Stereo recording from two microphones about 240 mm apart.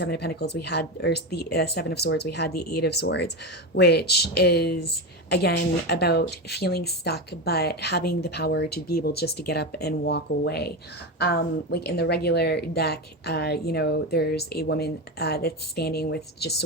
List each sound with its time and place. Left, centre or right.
0.0 s speech: left